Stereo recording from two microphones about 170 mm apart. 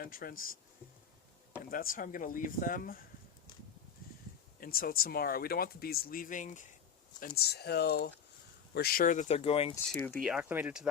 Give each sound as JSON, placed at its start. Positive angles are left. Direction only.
{"t": 0.0, "sound": "speech", "side_deg": 55}
{"t": 1.7, "sound": "speech", "side_deg": 55}
{"t": 4.6, "sound": "speech", "side_deg": 60}
{"t": 7.2, "sound": "speech", "side_deg": 60}
{"t": 9.7, "sound": "speech", "side_deg": 10}
{"t": 10.2, "sound": "speech", "side_deg": -5}